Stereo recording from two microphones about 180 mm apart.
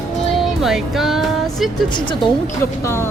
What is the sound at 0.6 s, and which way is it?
Speech, centre (ahead or behind).